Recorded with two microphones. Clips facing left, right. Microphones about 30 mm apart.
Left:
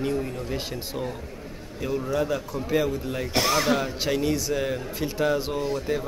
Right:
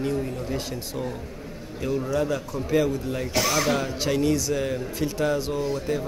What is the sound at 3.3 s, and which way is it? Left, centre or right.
Speech, left.